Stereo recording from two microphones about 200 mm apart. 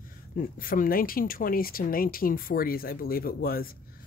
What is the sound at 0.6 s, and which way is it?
Speech, 45° left (ahead or behind).